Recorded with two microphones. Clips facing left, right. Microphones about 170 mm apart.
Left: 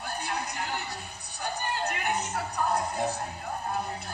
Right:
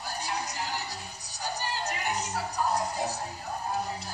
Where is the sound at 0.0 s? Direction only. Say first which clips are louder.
Left 1 dB; 55° left (ahead or behind).